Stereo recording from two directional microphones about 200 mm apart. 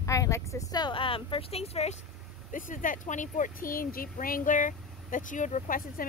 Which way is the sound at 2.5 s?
40° left (ahead or behind).